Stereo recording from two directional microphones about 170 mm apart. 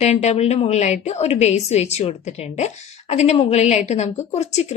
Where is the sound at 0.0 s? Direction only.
40° left (ahead or behind).